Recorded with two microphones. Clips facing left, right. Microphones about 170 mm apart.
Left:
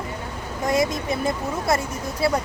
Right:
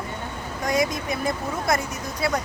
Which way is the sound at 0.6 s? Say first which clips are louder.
Left 2 dB; 25° left (ahead or behind).